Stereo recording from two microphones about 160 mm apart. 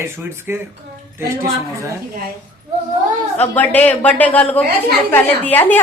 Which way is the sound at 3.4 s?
10° left (ahead or behind).